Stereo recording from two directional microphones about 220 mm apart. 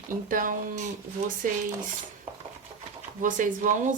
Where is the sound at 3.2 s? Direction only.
35° right (ahead or behind).